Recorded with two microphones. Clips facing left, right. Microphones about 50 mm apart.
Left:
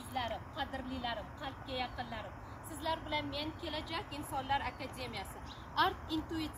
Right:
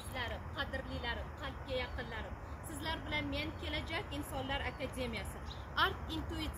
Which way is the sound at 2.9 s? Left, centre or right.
Right.